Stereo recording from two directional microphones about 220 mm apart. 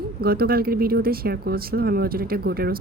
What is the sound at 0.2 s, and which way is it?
Speech, 45° right (ahead or behind).